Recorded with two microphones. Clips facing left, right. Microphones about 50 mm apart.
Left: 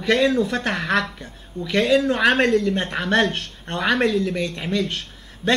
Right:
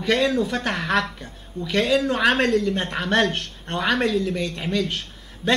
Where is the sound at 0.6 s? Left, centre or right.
Centre.